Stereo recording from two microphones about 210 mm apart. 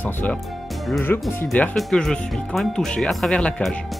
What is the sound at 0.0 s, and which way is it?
Speech, 10° left (ahead or behind).